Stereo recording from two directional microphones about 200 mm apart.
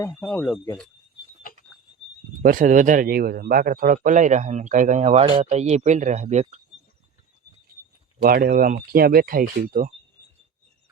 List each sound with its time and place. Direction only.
0.0 s speech: 5° left (ahead or behind)
2.4 s a man's voice: 45° right (ahead or behind)
8.2 s speech: 45° right (ahead or behind)